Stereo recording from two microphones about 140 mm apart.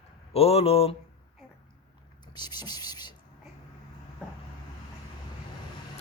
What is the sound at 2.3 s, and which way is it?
Speech, 30° left (ahead or behind).